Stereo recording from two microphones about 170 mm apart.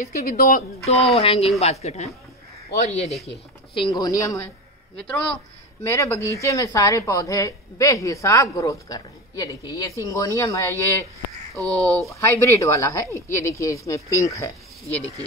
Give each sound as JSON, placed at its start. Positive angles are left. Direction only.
{"t": 0.0, "sound": "speech", "side_deg": 55}
{"t": 0.8, "sound": "speech", "side_deg": 35}
{"t": 4.9, "sound": "a woman's voice", "side_deg": 5}
{"t": 5.9, "sound": "speech", "side_deg": 15}
{"t": 12.1, "sound": "a woman's voice", "side_deg": 15}